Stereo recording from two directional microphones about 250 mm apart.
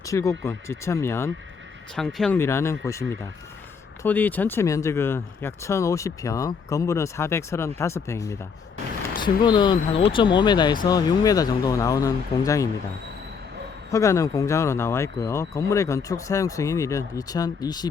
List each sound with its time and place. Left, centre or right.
0.0 s speech: centre
13.9 s speech: centre